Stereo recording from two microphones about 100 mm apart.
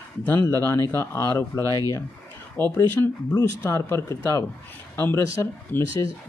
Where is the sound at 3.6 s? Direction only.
25° left (ahead or behind).